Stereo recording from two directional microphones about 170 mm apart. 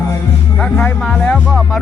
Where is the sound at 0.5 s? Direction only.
5° left (ahead or behind).